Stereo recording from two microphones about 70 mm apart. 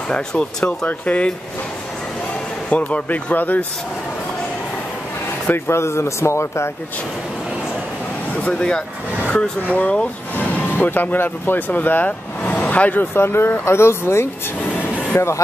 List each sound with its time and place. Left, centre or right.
0.1 s speech: centre
2.7 s speech: left
5.5 s speech: left
8.5 s speech: centre
13.0 s speech: left
14.7 s a sound: centre
15.1 s speech: left